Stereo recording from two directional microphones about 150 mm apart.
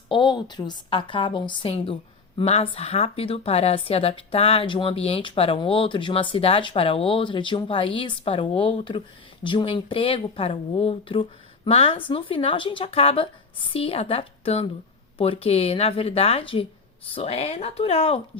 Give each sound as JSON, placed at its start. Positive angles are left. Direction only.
{"t": 0.1, "sound": "a woman's voice", "side_deg": 30}